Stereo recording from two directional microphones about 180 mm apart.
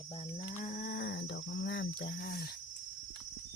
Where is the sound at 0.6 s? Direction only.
50° left (ahead or behind); by 1.8 s 75° left (ahead or behind).